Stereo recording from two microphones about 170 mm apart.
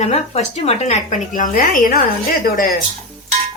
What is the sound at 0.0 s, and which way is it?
A woman's voice, 40° left (ahead or behind).